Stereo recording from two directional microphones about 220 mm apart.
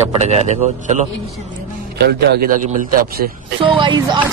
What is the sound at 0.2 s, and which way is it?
Speech, 30° right (ahead or behind).